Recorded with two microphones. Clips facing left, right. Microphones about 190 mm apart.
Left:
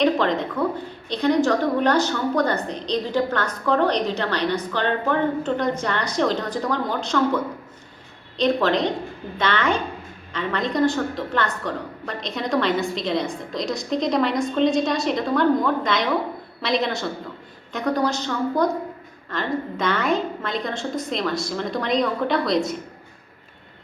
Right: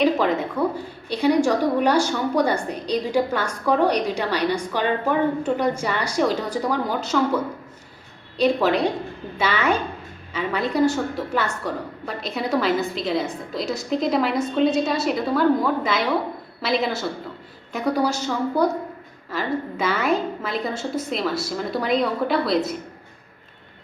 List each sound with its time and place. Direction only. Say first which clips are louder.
0.0 s a woman's voice: even; 5° right (ahead or behind)
8.4 s a woman's voice: right 1 dB; 10° right (ahead or behind)